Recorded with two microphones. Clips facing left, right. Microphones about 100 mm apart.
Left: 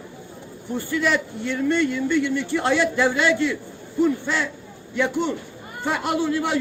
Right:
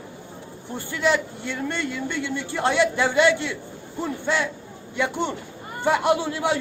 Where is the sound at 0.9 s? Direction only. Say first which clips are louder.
Right 1 dB; 20° right (ahead or behind).